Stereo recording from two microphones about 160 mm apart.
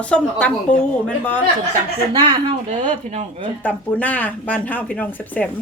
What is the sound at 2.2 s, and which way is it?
Speech, 30° right (ahead or behind).